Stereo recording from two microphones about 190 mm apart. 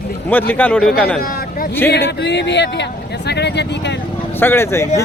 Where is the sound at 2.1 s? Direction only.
65° left (ahead or behind).